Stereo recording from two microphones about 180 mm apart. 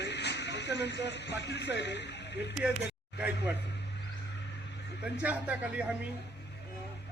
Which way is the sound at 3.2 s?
10° right (ahead or behind).